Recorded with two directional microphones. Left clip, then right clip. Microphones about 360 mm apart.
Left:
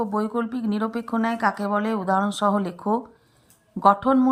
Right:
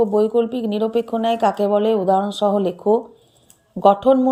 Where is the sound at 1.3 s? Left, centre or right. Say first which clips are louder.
Right 6 dB; centre.